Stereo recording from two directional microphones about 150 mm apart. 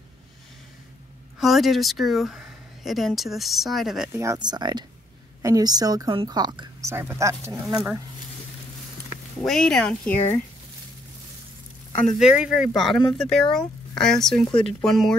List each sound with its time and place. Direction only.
1.4 s speech: centre (ahead or behind)
4.1 s speech: 20° right (ahead or behind)
7.6 s speech: 5° right (ahead or behind)
9.4 s speech: 5° left (ahead or behind)
12.2 s speech: 5° right (ahead or behind)